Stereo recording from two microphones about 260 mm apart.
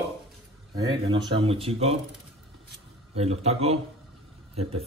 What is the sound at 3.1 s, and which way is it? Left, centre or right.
Speech, right.